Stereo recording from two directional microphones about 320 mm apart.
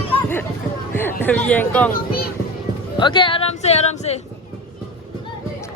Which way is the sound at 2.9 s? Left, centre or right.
Centre.